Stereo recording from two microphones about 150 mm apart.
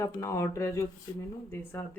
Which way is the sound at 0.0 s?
20° left (ahead or behind).